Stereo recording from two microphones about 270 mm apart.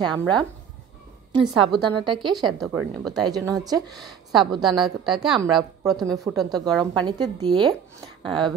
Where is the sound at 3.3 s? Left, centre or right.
Centre.